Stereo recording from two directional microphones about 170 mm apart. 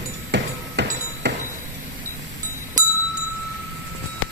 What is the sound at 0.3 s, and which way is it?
Music, 90° right.